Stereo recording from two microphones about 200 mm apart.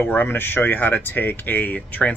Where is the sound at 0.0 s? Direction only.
10° left (ahead or behind).